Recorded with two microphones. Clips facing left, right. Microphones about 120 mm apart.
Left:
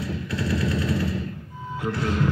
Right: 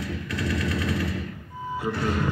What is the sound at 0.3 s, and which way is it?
Machine gun, 35° left (ahead or behind).